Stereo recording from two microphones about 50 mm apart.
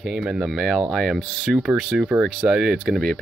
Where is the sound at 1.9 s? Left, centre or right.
Centre.